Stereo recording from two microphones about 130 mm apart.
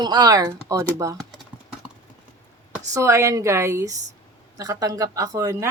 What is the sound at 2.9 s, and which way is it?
Speech, 25° right (ahead or behind).